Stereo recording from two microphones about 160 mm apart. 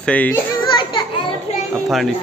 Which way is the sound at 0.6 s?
30° left (ahead or behind).